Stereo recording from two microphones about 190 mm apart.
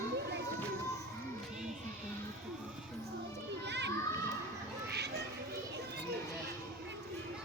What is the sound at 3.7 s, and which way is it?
Children playing, 65° right (ahead or behind).